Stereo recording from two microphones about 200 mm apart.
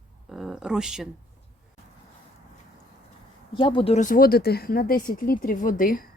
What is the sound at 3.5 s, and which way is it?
Speech, 25° left (ahead or behind).